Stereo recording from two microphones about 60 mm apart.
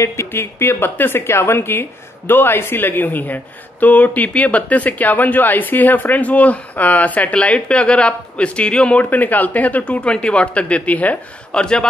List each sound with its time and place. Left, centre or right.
0.0 s a woman's voice: left; by 9.0 s centre
9.1 s speech: left
11.6 s a man's voice: centre